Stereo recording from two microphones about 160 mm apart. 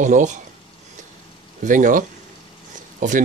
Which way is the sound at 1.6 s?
55° right (ahead or behind).